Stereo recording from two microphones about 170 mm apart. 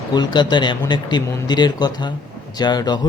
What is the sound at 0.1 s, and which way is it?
A man's voice, 25° left (ahead or behind).